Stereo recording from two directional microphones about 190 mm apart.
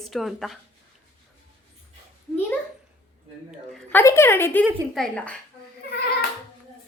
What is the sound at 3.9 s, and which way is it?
A woman's voice, 15° left (ahead or behind).